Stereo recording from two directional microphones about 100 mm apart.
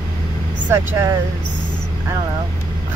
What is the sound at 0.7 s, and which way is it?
Speech, 25° right (ahead or behind).